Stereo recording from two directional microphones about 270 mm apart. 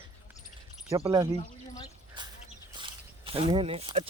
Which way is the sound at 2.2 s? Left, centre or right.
Centre.